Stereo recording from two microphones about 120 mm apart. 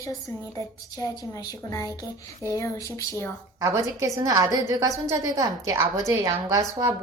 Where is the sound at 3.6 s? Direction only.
25° right (ahead or behind).